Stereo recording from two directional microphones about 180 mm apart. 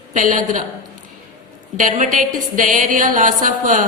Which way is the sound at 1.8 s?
45° right (ahead or behind).